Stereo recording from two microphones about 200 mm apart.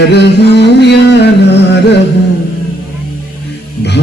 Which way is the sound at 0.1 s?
55° left (ahead or behind).